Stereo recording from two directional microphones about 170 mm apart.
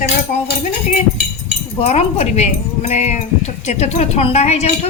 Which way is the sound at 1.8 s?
40° left (ahead or behind).